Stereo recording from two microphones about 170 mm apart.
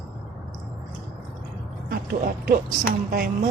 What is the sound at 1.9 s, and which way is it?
A woman's voice, 60° right (ahead or behind).